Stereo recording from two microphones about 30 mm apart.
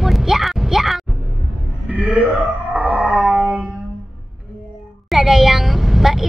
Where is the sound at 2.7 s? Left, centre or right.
Right.